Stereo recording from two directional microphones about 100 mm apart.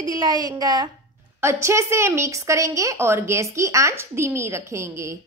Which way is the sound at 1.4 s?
30° right (ahead or behind).